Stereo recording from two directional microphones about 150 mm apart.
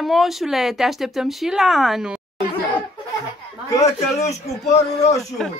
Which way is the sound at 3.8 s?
50° left (ahead or behind).